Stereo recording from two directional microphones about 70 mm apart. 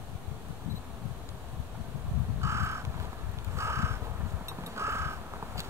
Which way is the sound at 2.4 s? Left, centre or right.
Right.